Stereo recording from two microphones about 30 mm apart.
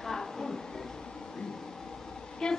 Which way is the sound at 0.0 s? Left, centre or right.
Centre.